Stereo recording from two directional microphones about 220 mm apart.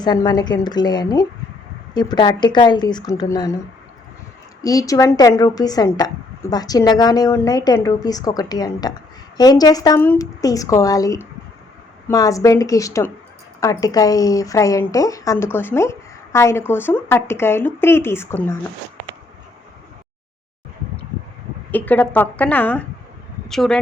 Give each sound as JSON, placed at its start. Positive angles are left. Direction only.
{"t": 0.0, "sound": "speech", "side_deg": 20}
{"t": 4.6, "sound": "speech", "side_deg": 15}
{"t": 21.7, "sound": "speech", "side_deg": 10}